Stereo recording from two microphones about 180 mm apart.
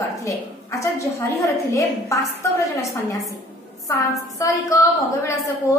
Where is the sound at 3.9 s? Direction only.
20° left (ahead or behind).